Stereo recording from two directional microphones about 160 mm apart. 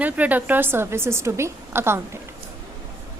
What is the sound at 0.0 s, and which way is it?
A woman's voice, 10° right (ahead or behind).